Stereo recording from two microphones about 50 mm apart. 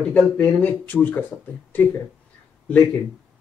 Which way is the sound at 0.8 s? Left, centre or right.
Left.